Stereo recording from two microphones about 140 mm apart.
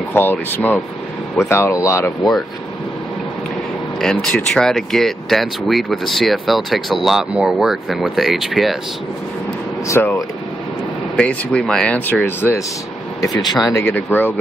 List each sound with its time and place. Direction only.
0.1 s speech: 15° left (ahead or behind)
4.0 s speech: 5° left (ahead or behind)
9.8 s speech: 20° left (ahead or behind)
11.1 s speech: 5° left (ahead or behind)
13.2 s speech: 30° left (ahead or behind)
13.8 s speech: 15° left (ahead or behind)